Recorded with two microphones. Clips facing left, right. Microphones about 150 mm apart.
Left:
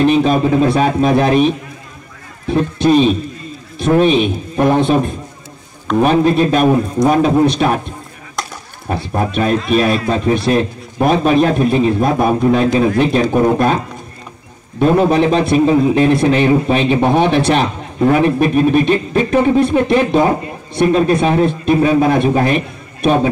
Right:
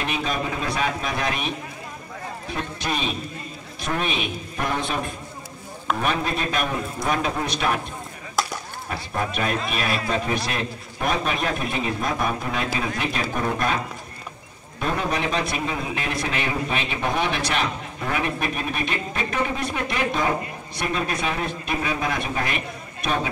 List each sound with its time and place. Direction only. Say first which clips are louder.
0.0 s a man's voice: left 14 dB; 30° left (ahead or behind)
2.5 s a man's voice: left 17 dB; 30° left (ahead or behind)
8.4 s chop: even; 5° right (ahead or behind)
8.8 s a man's voice: left 10 dB; 30° left (ahead or behind)
14.8 s a man's voice: left 14 dB; 30° left (ahead or behind)